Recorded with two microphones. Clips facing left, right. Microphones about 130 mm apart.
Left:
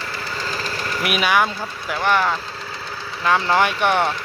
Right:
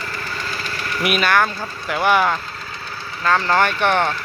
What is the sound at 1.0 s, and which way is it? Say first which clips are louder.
Speech: right 1 dB; 5° left (ahead or behind).